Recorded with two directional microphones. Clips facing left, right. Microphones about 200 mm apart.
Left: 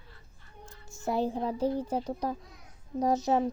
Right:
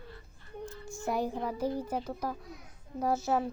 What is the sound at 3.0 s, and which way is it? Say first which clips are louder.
Speech: left 3 dB; 35° left (ahead or behind).